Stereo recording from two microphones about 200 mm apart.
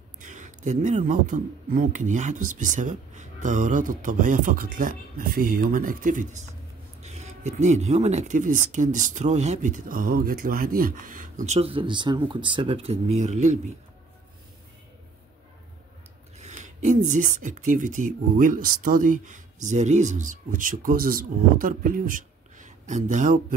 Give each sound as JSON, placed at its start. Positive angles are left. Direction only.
{"t": 0.2, "sound": "speech", "side_deg": -40}
{"t": 16.3, "sound": "speech", "side_deg": -35}